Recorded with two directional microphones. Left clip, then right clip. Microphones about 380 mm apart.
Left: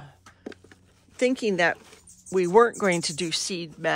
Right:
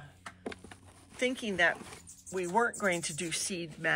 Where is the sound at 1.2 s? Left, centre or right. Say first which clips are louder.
Left 7 dB; left.